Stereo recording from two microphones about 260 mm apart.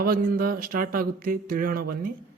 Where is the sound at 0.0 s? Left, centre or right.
Right.